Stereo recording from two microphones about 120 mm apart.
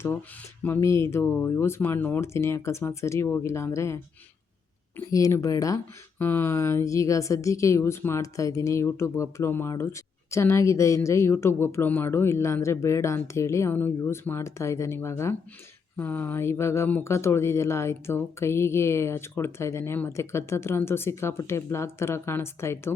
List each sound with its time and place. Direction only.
0.6 s a woman's voice: 20° left (ahead or behind)
5.1 s a woman's voice: 25° left (ahead or behind)